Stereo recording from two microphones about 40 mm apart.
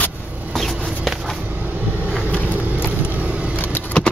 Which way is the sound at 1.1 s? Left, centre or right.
Centre.